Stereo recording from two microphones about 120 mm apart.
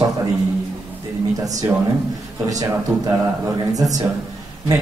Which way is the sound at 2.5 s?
30° right (ahead or behind).